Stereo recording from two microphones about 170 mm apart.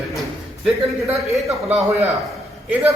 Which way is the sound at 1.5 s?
40° right (ahead or behind).